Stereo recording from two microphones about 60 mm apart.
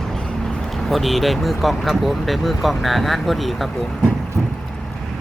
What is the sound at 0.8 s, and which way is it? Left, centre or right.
Speech, centre.